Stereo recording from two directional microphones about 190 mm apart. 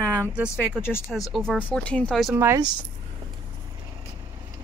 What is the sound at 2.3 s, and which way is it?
Speech, 15° right (ahead or behind).